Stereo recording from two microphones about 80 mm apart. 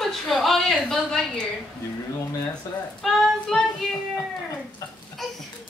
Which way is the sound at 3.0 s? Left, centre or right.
Centre.